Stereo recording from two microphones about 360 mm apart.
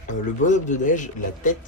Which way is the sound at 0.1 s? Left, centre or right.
Centre.